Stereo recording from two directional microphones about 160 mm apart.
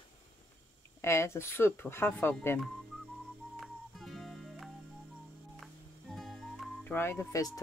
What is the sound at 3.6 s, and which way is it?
Music, centre (ahead or behind).